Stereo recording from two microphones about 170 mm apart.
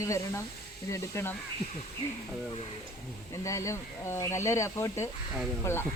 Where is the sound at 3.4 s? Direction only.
15° left (ahead or behind).